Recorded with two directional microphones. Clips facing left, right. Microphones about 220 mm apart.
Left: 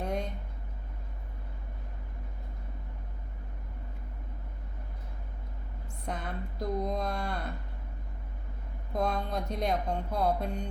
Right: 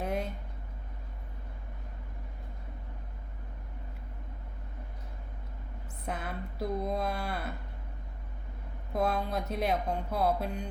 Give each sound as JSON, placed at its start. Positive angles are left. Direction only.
{"t": 0.0, "sound": "a sound", "side_deg": -5}
{"t": 6.1, "sound": "speech", "side_deg": -5}
{"t": 8.9, "sound": "speech", "side_deg": -5}